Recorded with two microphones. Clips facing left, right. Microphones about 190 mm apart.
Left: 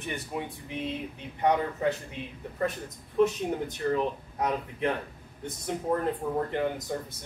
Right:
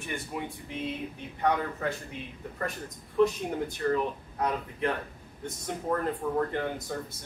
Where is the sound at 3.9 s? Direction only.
20° left (ahead or behind).